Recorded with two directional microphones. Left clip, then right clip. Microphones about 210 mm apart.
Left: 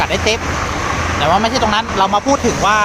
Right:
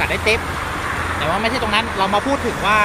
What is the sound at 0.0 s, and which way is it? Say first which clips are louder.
Speech: left 2 dB; 15° left (ahead or behind).